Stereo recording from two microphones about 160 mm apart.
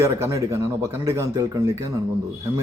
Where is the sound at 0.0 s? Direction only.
15° right (ahead or behind).